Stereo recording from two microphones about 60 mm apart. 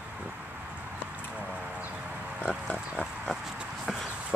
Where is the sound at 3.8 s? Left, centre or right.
Centre.